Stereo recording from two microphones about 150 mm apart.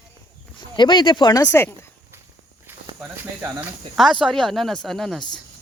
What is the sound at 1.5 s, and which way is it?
Speech, 15° left (ahead or behind).